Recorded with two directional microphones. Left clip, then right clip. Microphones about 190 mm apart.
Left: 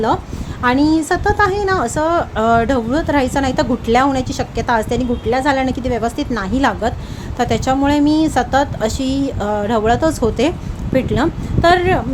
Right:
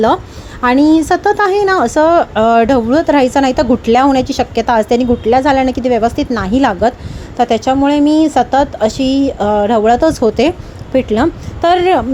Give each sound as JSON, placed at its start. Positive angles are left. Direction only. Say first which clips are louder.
{"t": 0.6, "sound": "a woman's voice", "louder": "right 5 dB", "side_deg": -30}